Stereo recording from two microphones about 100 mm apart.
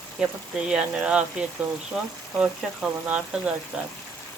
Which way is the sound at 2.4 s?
15° right (ahead or behind).